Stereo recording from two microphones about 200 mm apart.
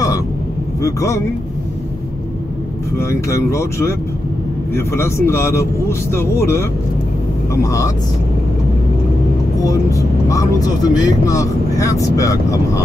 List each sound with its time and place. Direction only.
0.8 s speech: 15° left (ahead or behind)
3.0 s speech: 15° left (ahead or behind)
7.6 s speech: 15° left (ahead or behind)
9.7 s speech: 15° left (ahead or behind)